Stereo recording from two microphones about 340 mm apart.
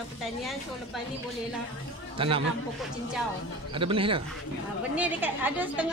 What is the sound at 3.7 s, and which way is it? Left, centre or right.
Speech, centre.